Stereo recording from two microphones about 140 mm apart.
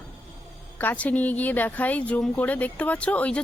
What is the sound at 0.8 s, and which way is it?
Speech, 10° left (ahead or behind).